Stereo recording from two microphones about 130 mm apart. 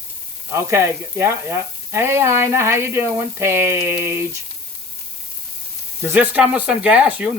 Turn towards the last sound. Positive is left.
turn(degrees=-10)  # may be behind; listen again after turning